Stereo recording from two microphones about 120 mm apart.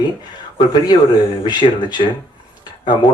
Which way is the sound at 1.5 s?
40° left (ahead or behind).